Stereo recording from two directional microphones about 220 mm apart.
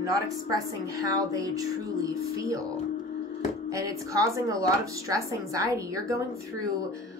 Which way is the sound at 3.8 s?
15° right (ahead or behind).